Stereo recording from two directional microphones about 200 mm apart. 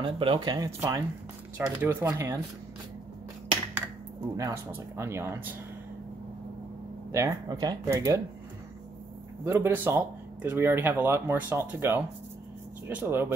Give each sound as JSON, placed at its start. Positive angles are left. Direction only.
{"t": 0.0, "sound": "speech", "side_deg": -25}
{"t": 4.4, "sound": "speech", "side_deg": -15}
{"t": 7.1, "sound": "speech", "side_deg": -15}
{"t": 9.4, "sound": "speech", "side_deg": -10}